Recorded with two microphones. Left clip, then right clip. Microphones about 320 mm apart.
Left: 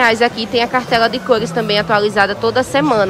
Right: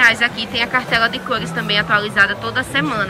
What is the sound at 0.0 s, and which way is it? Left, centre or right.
Speech, centre.